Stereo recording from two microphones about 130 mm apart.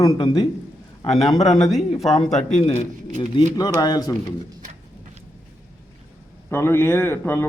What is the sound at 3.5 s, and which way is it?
Speech, 30° left (ahead or behind).